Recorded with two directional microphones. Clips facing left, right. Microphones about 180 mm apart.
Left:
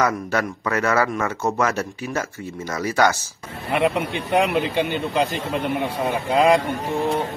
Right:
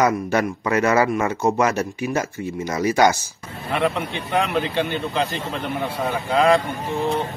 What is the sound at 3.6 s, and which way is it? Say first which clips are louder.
Speech: left 2 dB; 5° left (ahead or behind).